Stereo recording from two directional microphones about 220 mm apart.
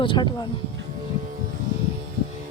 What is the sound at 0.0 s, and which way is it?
Speech, 20° left (ahead or behind).